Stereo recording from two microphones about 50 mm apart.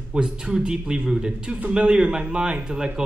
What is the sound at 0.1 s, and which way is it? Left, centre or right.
Speech, centre.